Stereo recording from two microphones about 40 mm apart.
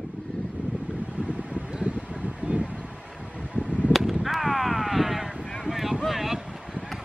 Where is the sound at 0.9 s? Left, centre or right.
Right.